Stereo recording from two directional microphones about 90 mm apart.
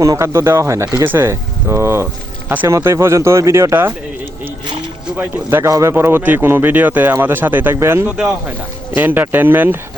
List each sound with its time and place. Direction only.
0.0 s speech: 35° right (ahead or behind)
5.1 s speech: 25° right (ahead or behind)
8.1 s speech: 10° right (ahead or behind)
9.0 s speech: 20° right (ahead or behind)